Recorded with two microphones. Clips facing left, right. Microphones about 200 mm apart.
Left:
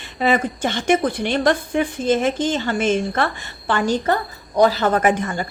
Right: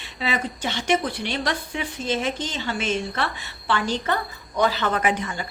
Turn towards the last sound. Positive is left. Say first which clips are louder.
# left 6 dB
turn(degrees=50)  # may be behind; listen again after turning